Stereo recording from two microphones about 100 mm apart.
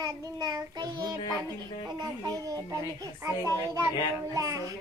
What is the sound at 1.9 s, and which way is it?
A child's voice, 40° right (ahead or behind).